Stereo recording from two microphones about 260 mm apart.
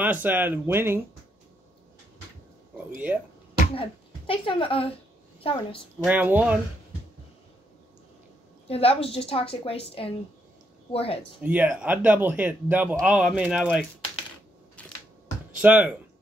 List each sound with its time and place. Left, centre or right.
0.0 s speech: centre
3.1 s speech: centre
3.7 s a woman's voice: centre
6.0 s speech: centre
8.6 s a woman's voice: left
11.4 s speech: centre
14.8 s camera: centre
15.6 s speech: centre